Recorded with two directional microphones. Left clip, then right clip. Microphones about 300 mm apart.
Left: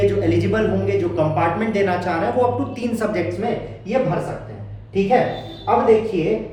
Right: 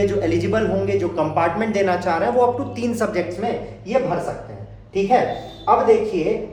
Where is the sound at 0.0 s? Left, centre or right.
Centre.